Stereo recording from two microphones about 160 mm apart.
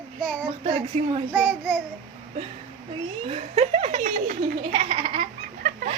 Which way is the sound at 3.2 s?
40° right (ahead or behind).